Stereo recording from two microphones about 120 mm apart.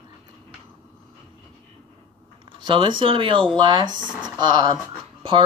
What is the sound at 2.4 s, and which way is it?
Speech, 45° right (ahead or behind).